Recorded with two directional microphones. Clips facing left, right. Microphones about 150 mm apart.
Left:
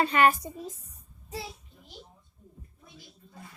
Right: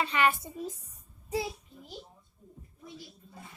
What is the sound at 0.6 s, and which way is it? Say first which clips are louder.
Speech: right 2 dB; centre (ahead or behind).